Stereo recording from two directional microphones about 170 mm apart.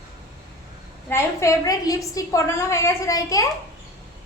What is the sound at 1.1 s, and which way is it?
A woman's voice, 15° left (ahead or behind).